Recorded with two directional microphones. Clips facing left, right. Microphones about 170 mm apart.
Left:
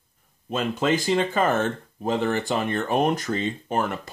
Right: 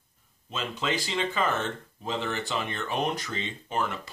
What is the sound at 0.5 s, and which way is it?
Speech, 50° left (ahead or behind).